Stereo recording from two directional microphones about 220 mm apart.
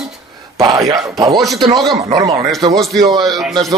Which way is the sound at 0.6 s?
15° right (ahead or behind).